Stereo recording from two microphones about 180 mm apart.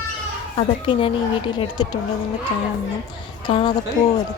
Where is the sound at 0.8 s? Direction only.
30° left (ahead or behind).